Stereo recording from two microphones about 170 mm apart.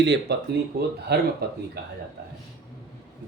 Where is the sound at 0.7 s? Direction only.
65° right (ahead or behind).